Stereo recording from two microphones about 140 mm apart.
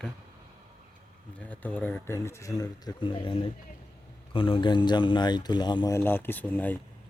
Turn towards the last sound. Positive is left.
turn(degrees=15)  # may be behind; listen again after turning